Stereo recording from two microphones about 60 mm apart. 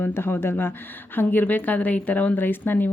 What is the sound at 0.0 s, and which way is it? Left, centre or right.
Speech, left.